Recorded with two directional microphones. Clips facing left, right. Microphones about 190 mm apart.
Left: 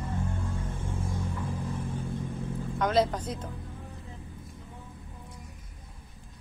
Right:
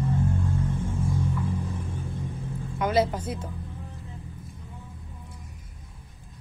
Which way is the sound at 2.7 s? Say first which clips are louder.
Right 2 dB; 5° right (ahead or behind).